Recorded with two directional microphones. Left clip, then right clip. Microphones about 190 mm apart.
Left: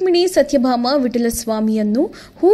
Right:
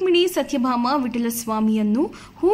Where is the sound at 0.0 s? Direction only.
15° left (ahead or behind).